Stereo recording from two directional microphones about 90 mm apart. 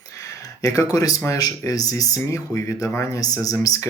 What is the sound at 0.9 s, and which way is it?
Speech, 45° left (ahead or behind).